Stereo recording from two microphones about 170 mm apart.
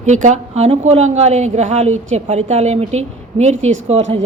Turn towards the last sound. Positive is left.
turn(degrees=-40)  # may be behind; listen again after turning